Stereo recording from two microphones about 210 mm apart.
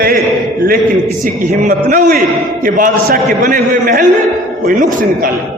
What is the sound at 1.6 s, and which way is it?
A man's voice, 40° right (ahead or behind).